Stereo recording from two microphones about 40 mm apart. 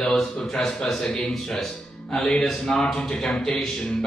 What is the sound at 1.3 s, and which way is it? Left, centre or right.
Speech, centre.